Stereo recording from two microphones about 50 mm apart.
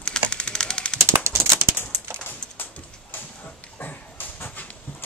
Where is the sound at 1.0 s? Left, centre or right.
Right.